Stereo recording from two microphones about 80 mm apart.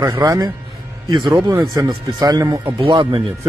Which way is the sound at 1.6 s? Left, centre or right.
Right.